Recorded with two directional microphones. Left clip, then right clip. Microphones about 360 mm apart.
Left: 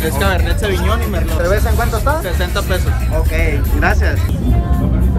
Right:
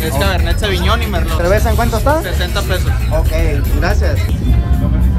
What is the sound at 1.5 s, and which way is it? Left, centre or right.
Speech, centre.